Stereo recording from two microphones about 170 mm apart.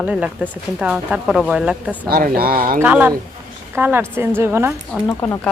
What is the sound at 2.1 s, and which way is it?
Speech, 60° right (ahead or behind).